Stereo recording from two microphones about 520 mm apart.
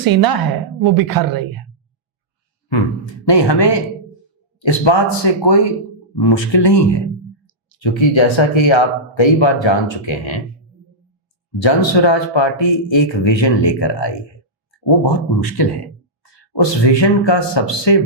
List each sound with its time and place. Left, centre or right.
0.0 s a woman's voice: right
3.2 s speech: left
11.6 s speech: left
15.5 s speech: left